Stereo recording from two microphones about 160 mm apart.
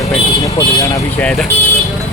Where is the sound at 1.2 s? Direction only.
Centre (ahead or behind).